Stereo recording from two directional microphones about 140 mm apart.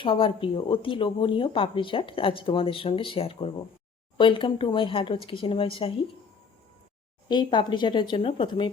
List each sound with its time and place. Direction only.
0.0 s speech: 35° left (ahead or behind)
7.3 s speech: 35° left (ahead or behind)